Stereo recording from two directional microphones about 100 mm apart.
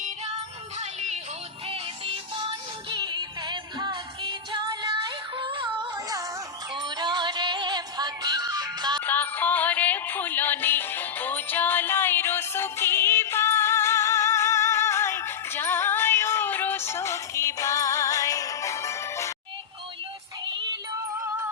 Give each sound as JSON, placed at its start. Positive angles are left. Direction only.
{"t": 2.9, "sound": "music", "side_deg": -50}
{"t": 9.0, "sound": "music", "side_deg": 20}